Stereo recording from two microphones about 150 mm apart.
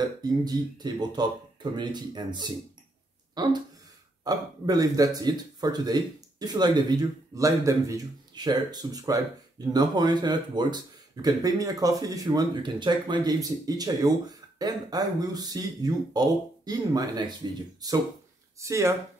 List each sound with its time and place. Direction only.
0.0 s speech: 25° right (ahead or behind)
18.6 s speech: 20° right (ahead or behind)